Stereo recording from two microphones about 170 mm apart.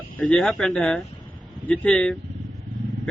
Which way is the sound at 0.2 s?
5° left (ahead or behind).